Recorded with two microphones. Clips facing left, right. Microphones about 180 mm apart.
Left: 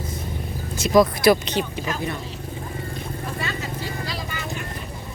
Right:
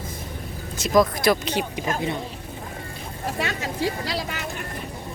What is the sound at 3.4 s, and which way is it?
Speech, 75° right (ahead or behind).